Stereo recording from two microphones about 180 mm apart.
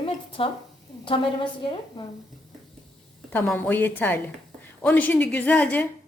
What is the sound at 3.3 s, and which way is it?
A woman's voice, 10° left (ahead or behind).